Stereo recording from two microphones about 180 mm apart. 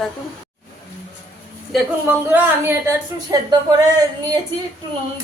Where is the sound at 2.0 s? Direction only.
10° right (ahead or behind).